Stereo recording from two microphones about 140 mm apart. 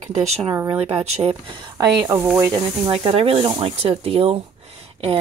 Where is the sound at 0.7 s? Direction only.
45° right (ahead or behind).